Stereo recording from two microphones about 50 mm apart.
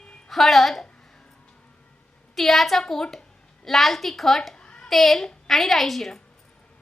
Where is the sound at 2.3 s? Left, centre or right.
Centre.